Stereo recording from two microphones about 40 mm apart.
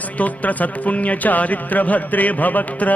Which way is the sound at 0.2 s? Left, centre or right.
Left.